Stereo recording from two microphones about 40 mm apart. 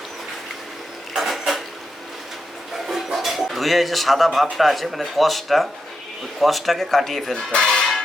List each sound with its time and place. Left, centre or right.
1.1 s a sound: centre
2.9 s music: centre
4.5 s speech: centre
7.3 s speech: left